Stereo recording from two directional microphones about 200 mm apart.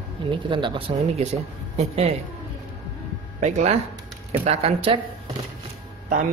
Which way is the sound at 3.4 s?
35° right (ahead or behind).